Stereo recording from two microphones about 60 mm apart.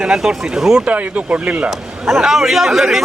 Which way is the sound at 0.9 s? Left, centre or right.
Right.